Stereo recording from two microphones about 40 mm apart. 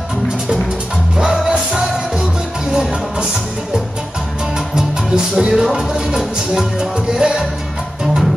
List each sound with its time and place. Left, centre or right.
1.1 s music: centre
2.7 s music: right
4.6 s music: centre
5.5 s music: centre